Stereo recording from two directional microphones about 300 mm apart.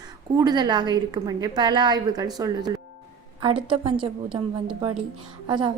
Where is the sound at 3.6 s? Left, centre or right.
Centre.